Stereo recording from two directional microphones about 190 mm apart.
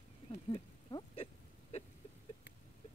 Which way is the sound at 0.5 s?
30° left (ahead or behind).